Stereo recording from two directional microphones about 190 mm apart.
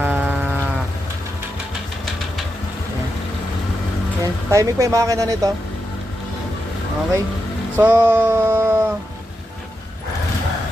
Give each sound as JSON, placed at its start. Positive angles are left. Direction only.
{"t": 0.0, "sound": "livestock", "side_deg": -10}
{"t": 4.2, "sound": "speech", "side_deg": -15}
{"t": 7.8, "sound": "a sound", "side_deg": -10}